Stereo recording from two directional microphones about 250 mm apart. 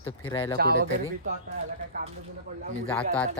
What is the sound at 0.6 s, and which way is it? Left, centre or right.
Speech, right.